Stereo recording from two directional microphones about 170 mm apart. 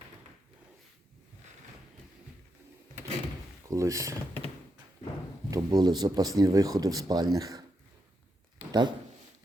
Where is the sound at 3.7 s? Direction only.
20° right (ahead or behind).